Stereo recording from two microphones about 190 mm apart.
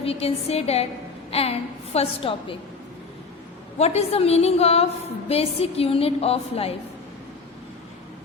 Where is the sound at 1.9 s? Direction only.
30° left (ahead or behind).